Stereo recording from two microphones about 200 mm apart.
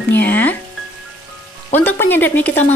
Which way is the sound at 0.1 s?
10° left (ahead or behind).